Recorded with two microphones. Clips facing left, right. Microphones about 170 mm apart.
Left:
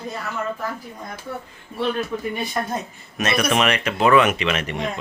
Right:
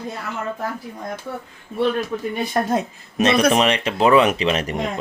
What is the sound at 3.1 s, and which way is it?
Speech, 35° right (ahead or behind).